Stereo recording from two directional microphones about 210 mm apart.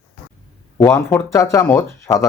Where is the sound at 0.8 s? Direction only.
10° left (ahead or behind).